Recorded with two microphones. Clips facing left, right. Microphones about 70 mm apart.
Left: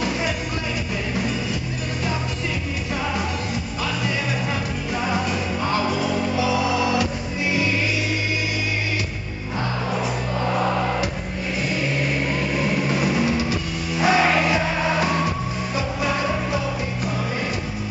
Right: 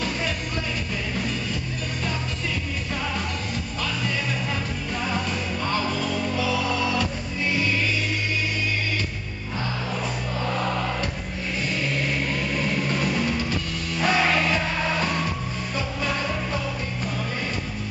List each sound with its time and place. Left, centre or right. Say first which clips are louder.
5.7 s music: left 4 dB; centre
10.4 s a sound: left 4 dB; centre
11.7 s vehicle: left 3 dB; centre
16.0 s music: left 4 dB; centre